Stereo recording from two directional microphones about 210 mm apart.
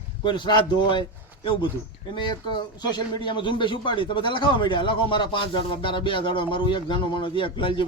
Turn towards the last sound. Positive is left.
turn(degrees=25)  # may be behind; listen again after turning